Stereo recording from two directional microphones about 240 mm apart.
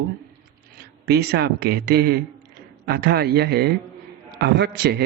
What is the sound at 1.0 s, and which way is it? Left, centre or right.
A man's voice, right.